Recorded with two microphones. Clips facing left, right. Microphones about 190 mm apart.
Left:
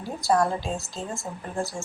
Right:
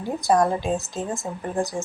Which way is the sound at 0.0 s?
20° right (ahead or behind).